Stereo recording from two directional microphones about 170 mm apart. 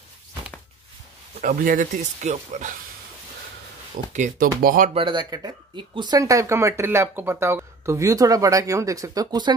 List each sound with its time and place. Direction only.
1.4 s speech: 55° right (ahead or behind)
4.1 s speech: 50° right (ahead or behind)
4.9 s speech: 30° right (ahead or behind)